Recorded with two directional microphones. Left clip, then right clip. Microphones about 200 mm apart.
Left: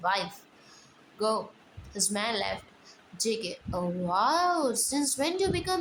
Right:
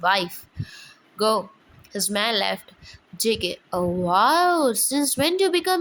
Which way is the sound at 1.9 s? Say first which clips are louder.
Right 7 dB; 30° right (ahead or behind).